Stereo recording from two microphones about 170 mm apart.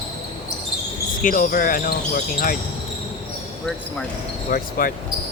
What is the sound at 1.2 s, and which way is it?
Speech, 50° left (ahead or behind).